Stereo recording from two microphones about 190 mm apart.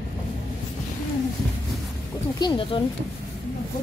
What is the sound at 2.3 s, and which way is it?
Speech, 25° left (ahead or behind).